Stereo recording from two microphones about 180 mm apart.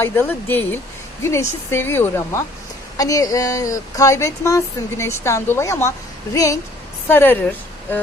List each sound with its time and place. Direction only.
0.0 s speech: 10° left (ahead or behind)